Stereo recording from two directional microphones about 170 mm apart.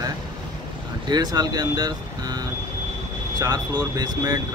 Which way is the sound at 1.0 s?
25° right (ahead or behind).